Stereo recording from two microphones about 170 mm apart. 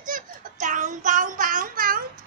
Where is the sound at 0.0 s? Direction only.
50° right (ahead or behind).